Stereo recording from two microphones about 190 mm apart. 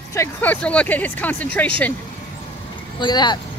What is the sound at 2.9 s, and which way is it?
Speech, 25° left (ahead or behind).